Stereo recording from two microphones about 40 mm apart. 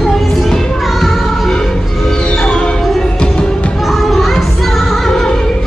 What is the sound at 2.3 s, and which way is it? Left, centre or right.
Music, left.